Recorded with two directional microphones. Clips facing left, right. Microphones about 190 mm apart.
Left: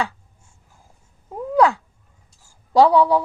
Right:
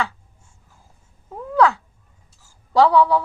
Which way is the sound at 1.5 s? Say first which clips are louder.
Left 1 dB; 15° left (ahead or behind).